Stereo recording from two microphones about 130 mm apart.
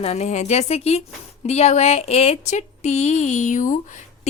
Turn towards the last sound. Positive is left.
turn(degrees=75)  # may be behind; listen again after turning